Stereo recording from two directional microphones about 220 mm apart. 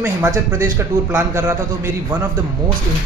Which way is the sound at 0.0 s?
15° right (ahead or behind).